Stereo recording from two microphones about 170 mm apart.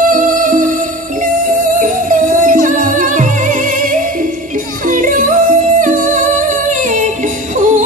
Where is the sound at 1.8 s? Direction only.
50° right (ahead or behind).